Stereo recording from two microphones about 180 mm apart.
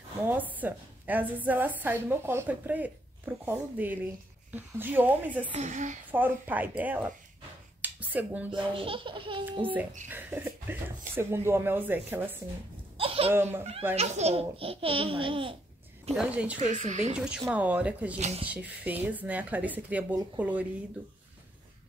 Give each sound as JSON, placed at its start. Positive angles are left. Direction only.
{"t": 0.3, "sound": "a woman's voice", "side_deg": -10}
{"t": 5.5, "sound": "a woman's voice", "side_deg": -40}
{"t": 6.1, "sound": "a woman's voice", "side_deg": -10}
{"t": 7.8, "sound": "a sound", "side_deg": -10}
{"t": 8.5, "sound": "speech", "side_deg": -30}
{"t": 10.0, "sound": "a woman's voice", "side_deg": -10}
{"t": 12.9, "sound": "a sound", "side_deg": -30}
{"t": 13.3, "sound": "a woman's voice", "side_deg": -10}
{"t": 13.9, "sound": "a child's voice", "side_deg": -35}
{"t": 16.2, "sound": "a woman's voice", "side_deg": -5}
{"t": 16.5, "sound": "a child's voice", "side_deg": -40}
{"t": 17.1, "sound": "a woman's voice", "side_deg": -5}
{"t": 18.1, "sound": "a child's voice", "side_deg": -35}
{"t": 18.5, "sound": "a woman's voice", "side_deg": -10}